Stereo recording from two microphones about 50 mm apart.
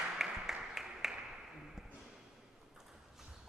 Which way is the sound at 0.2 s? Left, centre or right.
Centre.